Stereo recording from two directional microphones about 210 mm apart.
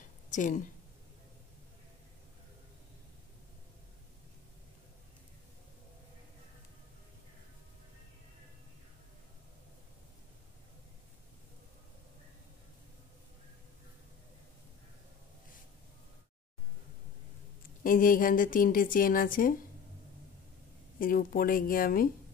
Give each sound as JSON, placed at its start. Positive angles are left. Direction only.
{"t": 0.3, "sound": "speech", "side_deg": 35}
{"t": 17.8, "sound": "speech", "side_deg": 40}
{"t": 21.0, "sound": "speech", "side_deg": 40}